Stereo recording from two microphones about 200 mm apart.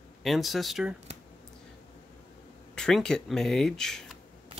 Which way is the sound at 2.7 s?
5° left (ahead or behind).